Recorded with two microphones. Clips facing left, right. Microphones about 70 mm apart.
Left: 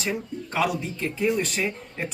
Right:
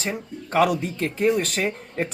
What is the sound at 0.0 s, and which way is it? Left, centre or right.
Speech, right.